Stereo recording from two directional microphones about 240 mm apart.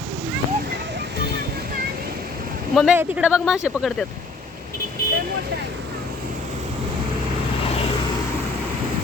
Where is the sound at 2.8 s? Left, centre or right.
Centre.